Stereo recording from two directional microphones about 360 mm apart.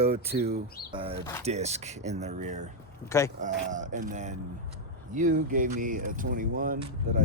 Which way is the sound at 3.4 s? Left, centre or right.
Right.